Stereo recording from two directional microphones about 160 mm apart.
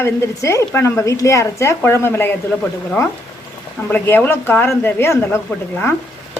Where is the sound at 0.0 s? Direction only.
15° left (ahead or behind).